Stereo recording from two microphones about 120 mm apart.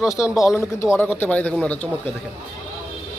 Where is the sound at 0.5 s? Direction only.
20° left (ahead or behind).